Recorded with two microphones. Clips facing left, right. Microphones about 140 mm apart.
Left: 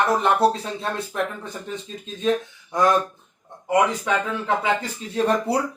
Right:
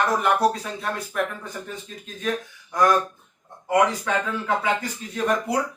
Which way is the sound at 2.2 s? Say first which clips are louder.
Left 5 dB; 25° left (ahead or behind).